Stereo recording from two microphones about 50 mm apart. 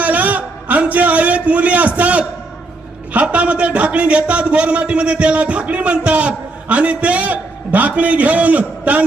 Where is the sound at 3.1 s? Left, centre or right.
Right.